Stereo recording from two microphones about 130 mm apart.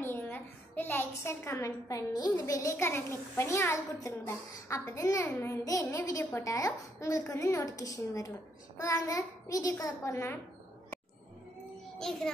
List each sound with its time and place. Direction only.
0.0 s a woman's voice: 15° left (ahead or behind)